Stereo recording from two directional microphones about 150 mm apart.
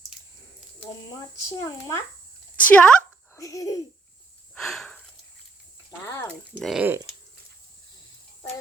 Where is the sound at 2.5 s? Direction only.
10° left (ahead or behind).